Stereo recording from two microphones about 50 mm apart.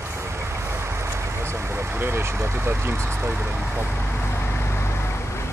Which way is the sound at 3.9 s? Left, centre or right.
Left.